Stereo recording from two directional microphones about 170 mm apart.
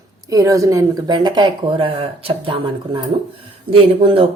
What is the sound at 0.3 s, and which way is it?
Speech, 20° right (ahead or behind).